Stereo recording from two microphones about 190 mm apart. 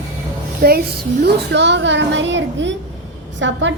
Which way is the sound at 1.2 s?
65° right (ahead or behind).